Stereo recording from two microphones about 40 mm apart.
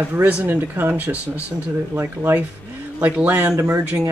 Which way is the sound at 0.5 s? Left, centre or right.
Right.